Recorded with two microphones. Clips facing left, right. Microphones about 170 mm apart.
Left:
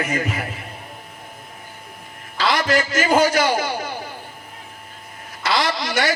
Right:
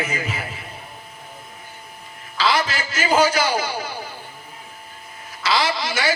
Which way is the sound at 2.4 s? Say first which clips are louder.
Left 2 dB; 50° left (ahead or behind).